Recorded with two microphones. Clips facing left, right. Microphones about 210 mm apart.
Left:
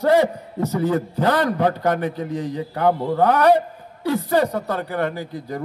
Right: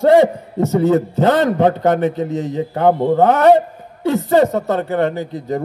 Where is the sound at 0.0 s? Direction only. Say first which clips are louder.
Right 6 dB; 25° right (ahead or behind).